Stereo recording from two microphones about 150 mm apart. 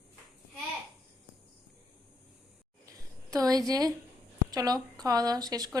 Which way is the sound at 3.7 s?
25° right (ahead or behind).